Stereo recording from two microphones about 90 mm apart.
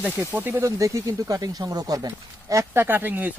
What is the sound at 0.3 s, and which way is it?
Speech, 20° right (ahead or behind).